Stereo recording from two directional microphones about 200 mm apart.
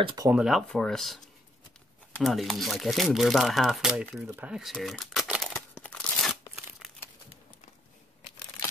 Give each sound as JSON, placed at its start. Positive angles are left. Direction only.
{"t": 0.0, "sound": "speech", "side_deg": -20}
{"t": 0.3, "sound": "speech", "side_deg": -5}